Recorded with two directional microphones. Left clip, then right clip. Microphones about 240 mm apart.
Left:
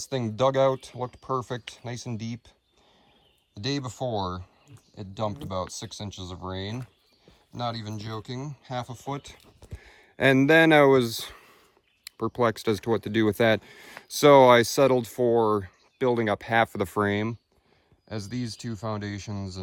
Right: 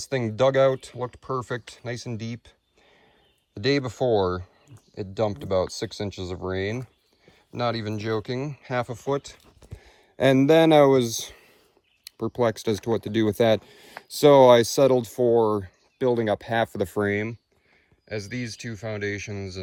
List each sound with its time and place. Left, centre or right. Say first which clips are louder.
0.1 s speech: right 3 dB; centre
3.5 s speech: right 7 dB; centre